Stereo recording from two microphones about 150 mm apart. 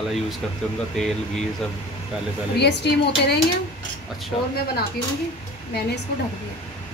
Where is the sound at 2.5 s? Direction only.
90° left.